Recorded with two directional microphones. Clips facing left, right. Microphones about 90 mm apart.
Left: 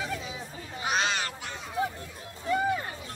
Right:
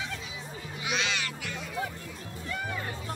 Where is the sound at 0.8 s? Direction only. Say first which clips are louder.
Left 4 dB; 40° left (ahead or behind).